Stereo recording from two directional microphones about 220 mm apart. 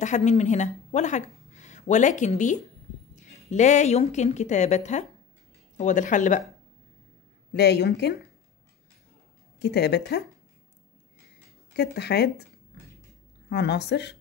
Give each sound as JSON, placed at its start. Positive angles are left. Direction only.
{"t": 0.0, "sound": "speech", "side_deg": 30}
{"t": 7.5, "sound": "speech", "side_deg": 50}
{"t": 9.6, "sound": "speech", "side_deg": 50}
{"t": 11.7, "sound": "speech", "side_deg": 50}
{"t": 13.5, "sound": "speech", "side_deg": 50}